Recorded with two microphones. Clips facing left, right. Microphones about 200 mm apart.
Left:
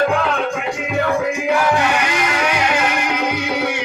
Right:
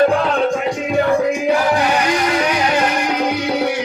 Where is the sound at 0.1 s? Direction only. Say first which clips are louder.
Right 3 dB; 35° right (ahead or behind).